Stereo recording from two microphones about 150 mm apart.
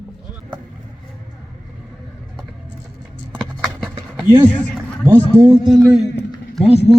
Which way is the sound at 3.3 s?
Centre (ahead or behind).